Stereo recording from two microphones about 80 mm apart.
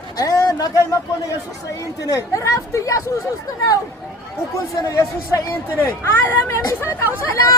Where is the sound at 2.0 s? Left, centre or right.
Left.